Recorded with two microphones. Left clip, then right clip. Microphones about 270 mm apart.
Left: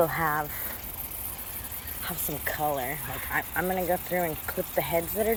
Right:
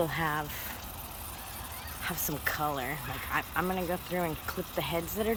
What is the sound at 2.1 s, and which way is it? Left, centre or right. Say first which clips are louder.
Speech: even; centre.